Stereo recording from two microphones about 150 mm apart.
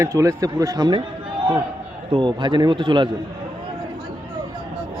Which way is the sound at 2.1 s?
30° right (ahead or behind).